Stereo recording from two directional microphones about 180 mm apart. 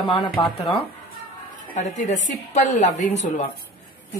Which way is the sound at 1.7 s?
45° left (ahead or behind).